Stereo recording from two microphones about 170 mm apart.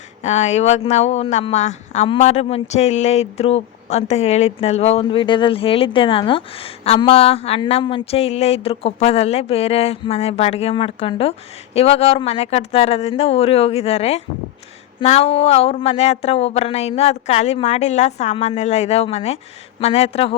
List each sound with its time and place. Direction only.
0.2 s speech: 40° left (ahead or behind)